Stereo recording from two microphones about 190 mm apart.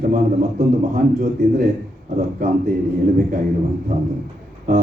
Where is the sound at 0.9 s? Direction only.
40° right (ahead or behind).